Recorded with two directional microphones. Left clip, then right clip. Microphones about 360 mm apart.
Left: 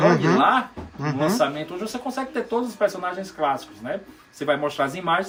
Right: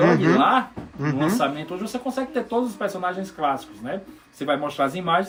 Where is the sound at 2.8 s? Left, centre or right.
Centre.